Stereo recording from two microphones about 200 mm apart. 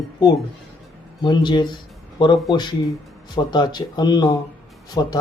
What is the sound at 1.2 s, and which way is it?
A man's voice, 20° left (ahead or behind).